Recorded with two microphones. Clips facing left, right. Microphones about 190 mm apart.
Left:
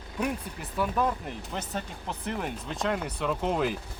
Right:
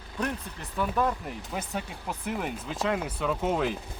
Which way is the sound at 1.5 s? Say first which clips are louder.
Right 1 dB; 10° right (ahead or behind).